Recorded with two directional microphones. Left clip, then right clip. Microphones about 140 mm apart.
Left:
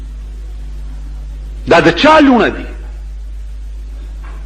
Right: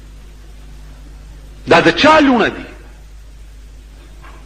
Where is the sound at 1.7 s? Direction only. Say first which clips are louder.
Left 2 dB; 35° left (ahead or behind).